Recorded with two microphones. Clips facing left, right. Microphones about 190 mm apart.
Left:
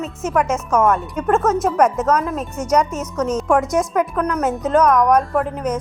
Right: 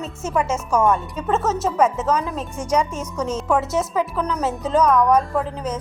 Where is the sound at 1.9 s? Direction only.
5° right (ahead or behind).